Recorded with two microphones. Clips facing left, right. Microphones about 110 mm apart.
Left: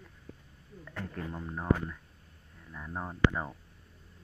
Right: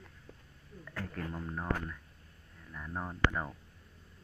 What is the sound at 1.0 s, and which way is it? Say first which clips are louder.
Speech: left 1 dB; 10° left (ahead or behind).